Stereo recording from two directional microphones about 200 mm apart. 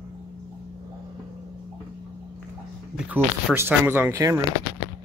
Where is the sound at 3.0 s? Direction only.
10° right (ahead or behind).